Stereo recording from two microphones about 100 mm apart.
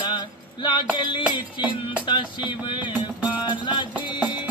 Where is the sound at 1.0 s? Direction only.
55° left (ahead or behind).